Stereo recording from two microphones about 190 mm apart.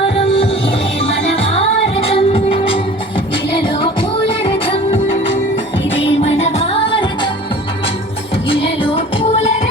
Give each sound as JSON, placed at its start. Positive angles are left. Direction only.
{"t": 0.2, "sound": "music", "side_deg": 30}
{"t": 4.4, "sound": "music", "side_deg": 25}
{"t": 5.9, "sound": "music", "side_deg": 75}
{"t": 6.9, "sound": "music", "side_deg": 25}
{"t": 8.4, "sound": "music", "side_deg": 30}